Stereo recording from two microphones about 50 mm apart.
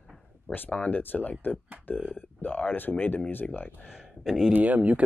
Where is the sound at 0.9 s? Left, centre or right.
Left.